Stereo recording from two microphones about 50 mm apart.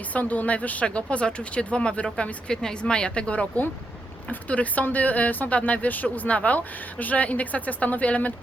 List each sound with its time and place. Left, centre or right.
0.1 s a woman's voice: left